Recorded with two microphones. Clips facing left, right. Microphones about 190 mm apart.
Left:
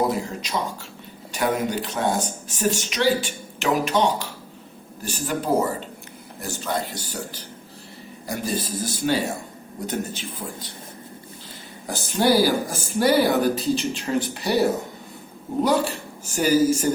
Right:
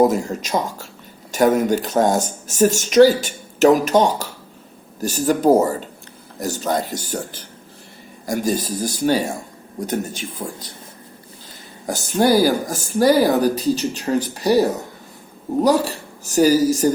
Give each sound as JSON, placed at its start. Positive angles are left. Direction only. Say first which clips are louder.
{"t": 0.0, "sound": "speech", "louder": "right 7 dB", "side_deg": -45}
{"t": 8.3, "sound": "speech", "louder": "right 6 dB", "side_deg": -45}
{"t": 11.9, "sound": "speech", "louder": "right 3 dB", "side_deg": -45}